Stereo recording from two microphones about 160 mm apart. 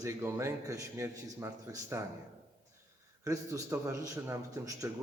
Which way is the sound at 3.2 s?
20° right (ahead or behind).